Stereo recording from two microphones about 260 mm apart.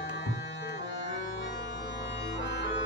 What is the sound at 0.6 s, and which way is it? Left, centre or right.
Music, left.